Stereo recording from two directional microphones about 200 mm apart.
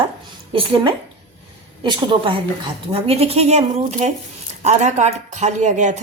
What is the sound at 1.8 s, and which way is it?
Speech, 25° right (ahead or behind).